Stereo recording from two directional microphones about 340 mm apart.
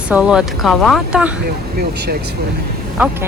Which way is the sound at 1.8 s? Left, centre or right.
Right.